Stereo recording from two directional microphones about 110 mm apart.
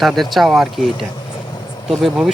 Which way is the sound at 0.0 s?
Centre (ahead or behind).